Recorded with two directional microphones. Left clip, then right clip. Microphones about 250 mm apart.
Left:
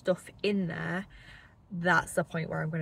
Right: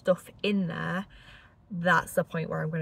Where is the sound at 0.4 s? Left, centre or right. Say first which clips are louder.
Right 1 dB; centre.